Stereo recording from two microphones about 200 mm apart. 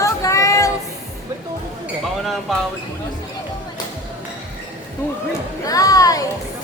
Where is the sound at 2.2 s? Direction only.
Centre (ahead or behind).